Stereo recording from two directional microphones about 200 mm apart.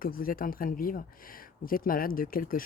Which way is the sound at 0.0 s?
45° left (ahead or behind).